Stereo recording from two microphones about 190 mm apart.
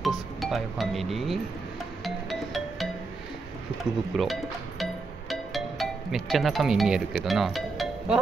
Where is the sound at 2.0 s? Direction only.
Centre (ahead or behind).